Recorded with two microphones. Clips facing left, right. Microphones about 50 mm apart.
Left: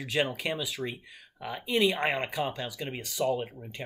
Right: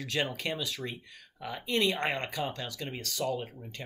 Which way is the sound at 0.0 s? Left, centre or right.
Centre.